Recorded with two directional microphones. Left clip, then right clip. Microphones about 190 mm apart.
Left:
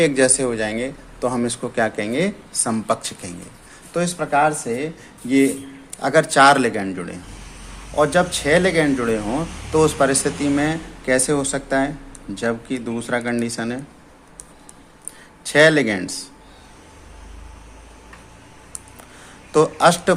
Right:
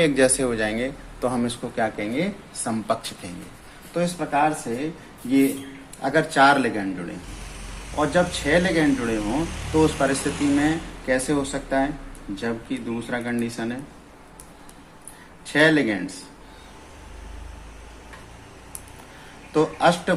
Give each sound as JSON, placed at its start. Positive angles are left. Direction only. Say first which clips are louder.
{"t": 0.0, "sound": "speech", "louder": "left 2 dB", "side_deg": 20}
{"t": 1.6, "sound": "speech", "louder": "left 6 dB", "side_deg": 40}
{"t": 3.9, "sound": "speech", "louder": "left 4 dB", "side_deg": 50}
{"t": 6.0, "sound": "speech", "louder": "left 4 dB", "side_deg": 50}
{"t": 15.5, "sound": "speech", "louder": "left 5 dB", "side_deg": 55}
{"t": 19.5, "sound": "speech", "louder": "left 5 dB", "side_deg": 55}